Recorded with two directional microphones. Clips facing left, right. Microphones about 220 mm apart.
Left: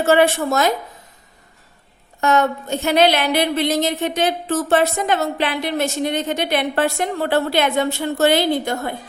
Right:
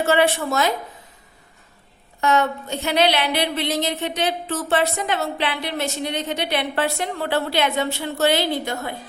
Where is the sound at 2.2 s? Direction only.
45° left (ahead or behind).